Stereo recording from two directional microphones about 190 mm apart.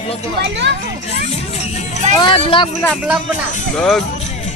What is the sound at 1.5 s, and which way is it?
Music, 35° left (ahead or behind).